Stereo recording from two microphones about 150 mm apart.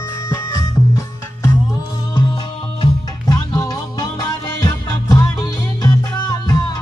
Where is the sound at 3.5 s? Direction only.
20° left (ahead or behind).